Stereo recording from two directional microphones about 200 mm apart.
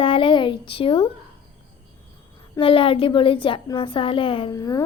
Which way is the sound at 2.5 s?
25° left (ahead or behind).